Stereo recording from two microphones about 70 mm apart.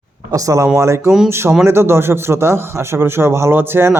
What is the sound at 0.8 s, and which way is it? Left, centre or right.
Speech, right.